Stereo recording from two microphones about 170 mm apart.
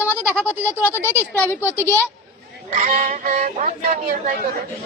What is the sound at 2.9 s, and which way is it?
Music, 50° right (ahead or behind).